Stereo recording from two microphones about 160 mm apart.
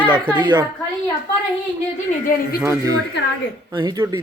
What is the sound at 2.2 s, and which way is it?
Speech, 60° left (ahead or behind).